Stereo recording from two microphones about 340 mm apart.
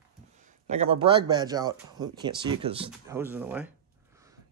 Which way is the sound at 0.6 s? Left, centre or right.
Centre.